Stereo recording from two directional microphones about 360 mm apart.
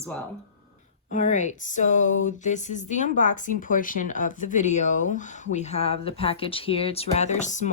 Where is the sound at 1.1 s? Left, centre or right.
Left.